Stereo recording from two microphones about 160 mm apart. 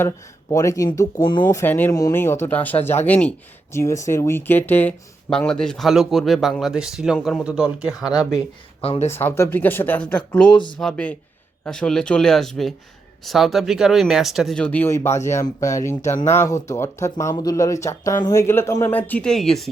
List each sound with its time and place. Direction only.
0.5 s speech: 20° left (ahead or behind)
1.5 s speech: 15° left (ahead or behind); by 7.9 s 5° right (ahead or behind)
8.8 s speech: 40° left (ahead or behind)
9.0 s speech: 15° left (ahead or behind)